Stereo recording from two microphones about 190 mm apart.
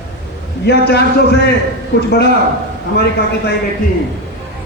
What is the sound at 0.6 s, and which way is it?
Speech, 60° left (ahead or behind).